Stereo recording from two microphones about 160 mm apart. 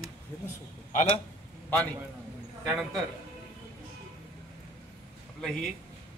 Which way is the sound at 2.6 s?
Centre (ahead or behind).